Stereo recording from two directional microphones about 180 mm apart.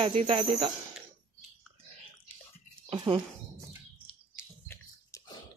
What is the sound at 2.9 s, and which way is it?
Speech, 25° right (ahead or behind).